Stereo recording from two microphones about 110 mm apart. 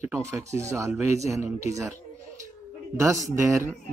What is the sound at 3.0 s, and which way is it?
Speech, 30° right (ahead or behind).